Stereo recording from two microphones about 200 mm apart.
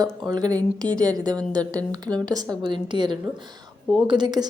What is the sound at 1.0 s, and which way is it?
A woman's voice, 20° right (ahead or behind).